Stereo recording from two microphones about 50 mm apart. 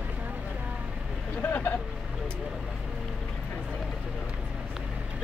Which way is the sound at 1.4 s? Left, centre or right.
Left.